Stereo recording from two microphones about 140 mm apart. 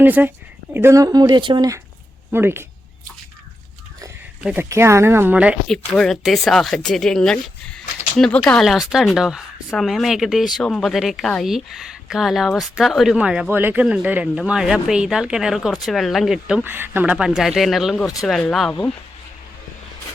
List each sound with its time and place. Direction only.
0.0 s speech: 15° right (ahead or behind); by 1.8 s 30° right (ahead or behind)
2.3 s speech: 15° right (ahead or behind)
4.7 s speech: 20° right (ahead or behind)
5.6 s a woman's voice: 5° left (ahead or behind)
16.6 s a woman's voice: 15° right (ahead or behind); by 18.7 s 5° left (ahead or behind)